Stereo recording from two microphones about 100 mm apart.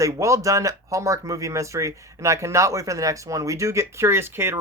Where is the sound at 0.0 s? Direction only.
30° right (ahead or behind).